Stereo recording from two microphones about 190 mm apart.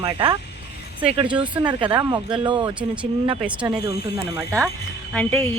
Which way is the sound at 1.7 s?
25° right (ahead or behind).